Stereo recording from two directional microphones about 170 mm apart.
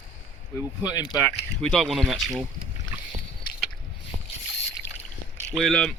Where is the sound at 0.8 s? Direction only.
25° left (ahead or behind).